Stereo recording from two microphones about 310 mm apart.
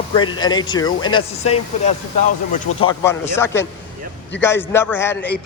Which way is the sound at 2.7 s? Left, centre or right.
Left.